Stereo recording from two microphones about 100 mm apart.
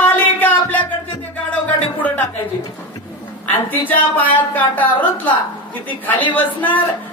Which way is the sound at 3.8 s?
15° left (ahead or behind).